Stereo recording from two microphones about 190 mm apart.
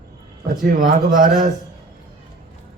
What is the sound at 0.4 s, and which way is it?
Speech, 45° right (ahead or behind).